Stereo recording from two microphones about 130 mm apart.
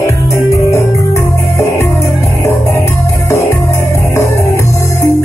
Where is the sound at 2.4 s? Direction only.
20° left (ahead or behind).